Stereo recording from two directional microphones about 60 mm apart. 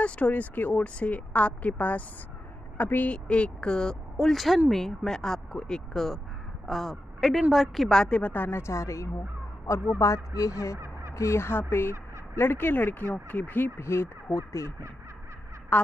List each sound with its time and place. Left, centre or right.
0.0 s speech: left
3.3 s a woman's voice: centre
7.9 s speech: centre
8.2 s speech: left
8.5 s speech: left
10.8 s crow: right
11.1 s speech: left
13.7 s speech: left
15.7 s speech: left